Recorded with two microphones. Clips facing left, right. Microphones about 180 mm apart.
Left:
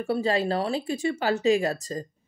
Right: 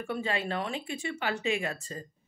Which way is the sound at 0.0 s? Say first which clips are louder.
Left 8 dB; 35° left (ahead or behind).